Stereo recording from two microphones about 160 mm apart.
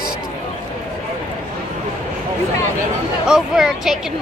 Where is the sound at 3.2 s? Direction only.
5° right (ahead or behind).